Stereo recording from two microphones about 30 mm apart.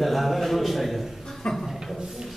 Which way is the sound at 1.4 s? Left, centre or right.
Left.